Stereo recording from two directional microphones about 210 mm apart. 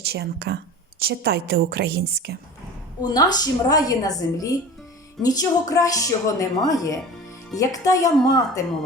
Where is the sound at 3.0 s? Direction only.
20° left (ahead or behind).